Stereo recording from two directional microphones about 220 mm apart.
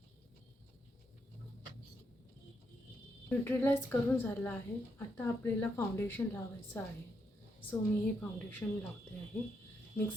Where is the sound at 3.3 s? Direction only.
10° left (ahead or behind).